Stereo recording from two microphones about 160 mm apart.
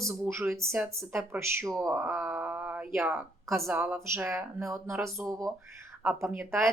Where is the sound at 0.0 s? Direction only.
15° right (ahead or behind).